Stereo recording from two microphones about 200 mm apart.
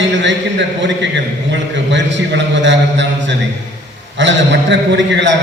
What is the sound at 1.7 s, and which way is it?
A man's voice, 65° right (ahead or behind).